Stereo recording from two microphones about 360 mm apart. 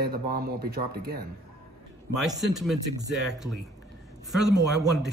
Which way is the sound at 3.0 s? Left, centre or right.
Right.